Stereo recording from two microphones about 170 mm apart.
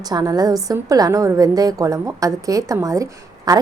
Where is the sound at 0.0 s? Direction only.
25° right (ahead or behind).